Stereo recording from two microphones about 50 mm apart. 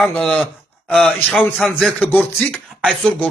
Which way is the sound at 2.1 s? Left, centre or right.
Left.